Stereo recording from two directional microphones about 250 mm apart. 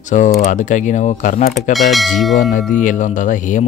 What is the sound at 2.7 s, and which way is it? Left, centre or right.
Speech, left.